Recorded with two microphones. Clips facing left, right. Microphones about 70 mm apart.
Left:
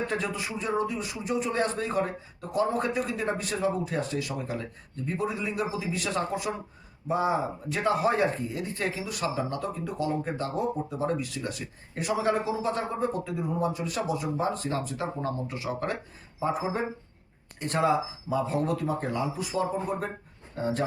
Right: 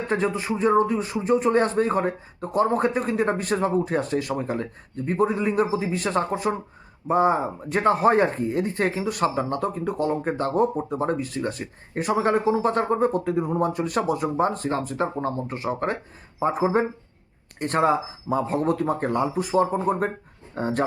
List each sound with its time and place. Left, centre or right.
0.1 s speech: right